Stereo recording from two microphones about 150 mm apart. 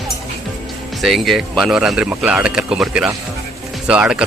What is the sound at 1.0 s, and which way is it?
Speech, centre (ahead or behind).